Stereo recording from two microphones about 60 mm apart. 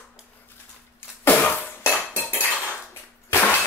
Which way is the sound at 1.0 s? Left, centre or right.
Left.